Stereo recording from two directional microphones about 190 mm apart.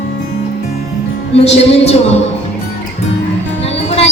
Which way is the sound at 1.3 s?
35° left (ahead or behind).